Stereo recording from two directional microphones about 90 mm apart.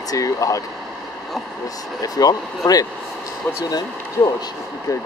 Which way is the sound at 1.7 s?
45° left (ahead or behind).